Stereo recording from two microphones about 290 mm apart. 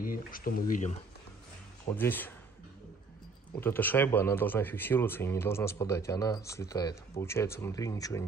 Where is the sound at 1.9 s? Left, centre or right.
Centre.